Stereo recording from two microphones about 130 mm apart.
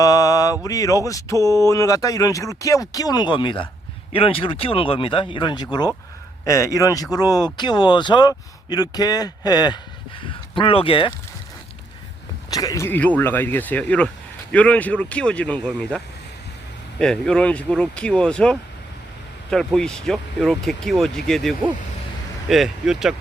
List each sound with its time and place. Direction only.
0.0 s mantra: 30° left (ahead or behind)
0.6 s speech: 25° left (ahead or behind)
1.4 s speech: 25° right (ahead or behind)
1.6 s speech: 25° left (ahead or behind)
6.4 s speech: 25° left (ahead or behind); by 11.1 s 45° left (ahead or behind)
12.5 s speech: 30° left (ahead or behind); by 16.0 s 10° left (ahead or behind)
17.0 s speech: 5° left (ahead or behind)